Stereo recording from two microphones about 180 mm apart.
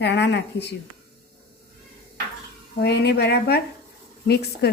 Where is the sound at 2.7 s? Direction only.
65° left (ahead or behind).